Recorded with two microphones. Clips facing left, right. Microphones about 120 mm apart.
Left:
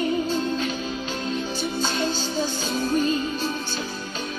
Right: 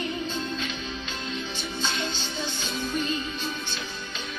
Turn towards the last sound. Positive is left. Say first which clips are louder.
# left 6 dB
turn(degrees=40)  # may be behind; listen again after turning